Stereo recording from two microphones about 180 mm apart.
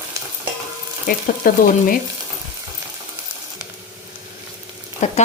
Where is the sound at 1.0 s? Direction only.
50° left (ahead or behind).